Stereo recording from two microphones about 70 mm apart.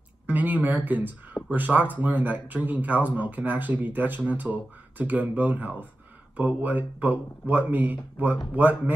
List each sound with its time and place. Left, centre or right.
0.3 s speech: right